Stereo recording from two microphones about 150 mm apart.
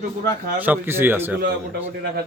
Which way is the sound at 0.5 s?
10° right (ahead or behind).